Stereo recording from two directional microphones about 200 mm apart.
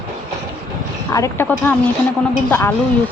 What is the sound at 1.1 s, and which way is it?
Speech, 15° left (ahead or behind).